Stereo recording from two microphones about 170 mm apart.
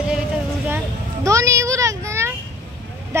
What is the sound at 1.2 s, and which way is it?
A child's voice, 20° right (ahead or behind).